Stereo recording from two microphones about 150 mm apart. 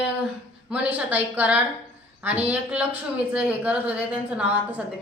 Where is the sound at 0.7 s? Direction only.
10° right (ahead or behind).